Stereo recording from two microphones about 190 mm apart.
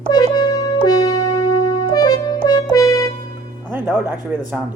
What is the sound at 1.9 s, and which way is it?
Music, 20° left (ahead or behind).